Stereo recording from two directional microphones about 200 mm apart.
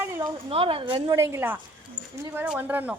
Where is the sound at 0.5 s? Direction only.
25° right (ahead or behind).